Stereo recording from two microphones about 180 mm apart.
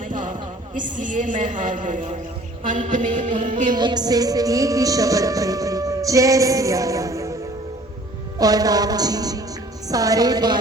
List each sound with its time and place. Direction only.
0.0 s a man's voice: 45° right (ahead or behind)
2.6 s music: 45° right (ahead or behind)
3.8 s music: 25° right (ahead or behind)
8.4 s music: 20° right (ahead or behind)